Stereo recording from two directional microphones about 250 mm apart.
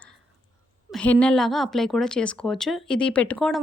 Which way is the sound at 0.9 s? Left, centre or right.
Centre.